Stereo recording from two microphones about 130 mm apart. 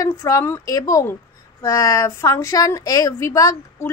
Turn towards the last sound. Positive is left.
turn(degrees=20)  # may be behind; listen again after turning